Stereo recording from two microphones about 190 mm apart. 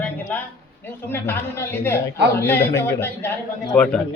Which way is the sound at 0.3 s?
10° left (ahead or behind).